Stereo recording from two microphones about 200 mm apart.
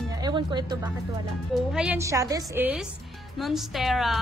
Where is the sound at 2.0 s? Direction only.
15° right (ahead or behind).